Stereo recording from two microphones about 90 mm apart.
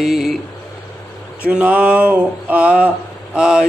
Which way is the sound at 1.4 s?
15° right (ahead or behind).